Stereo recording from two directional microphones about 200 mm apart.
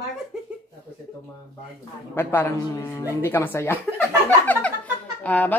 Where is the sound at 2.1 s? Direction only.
10° left (ahead or behind).